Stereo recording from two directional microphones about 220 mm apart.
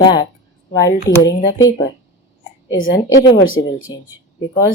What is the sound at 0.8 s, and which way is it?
Speech, 55° left (ahead or behind).